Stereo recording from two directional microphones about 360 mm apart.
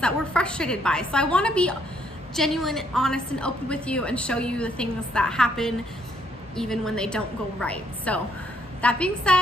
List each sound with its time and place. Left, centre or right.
0.0 s a woman's voice: centre